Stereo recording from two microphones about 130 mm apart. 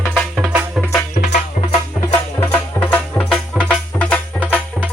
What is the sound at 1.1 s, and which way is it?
Music, 75° left (ahead or behind).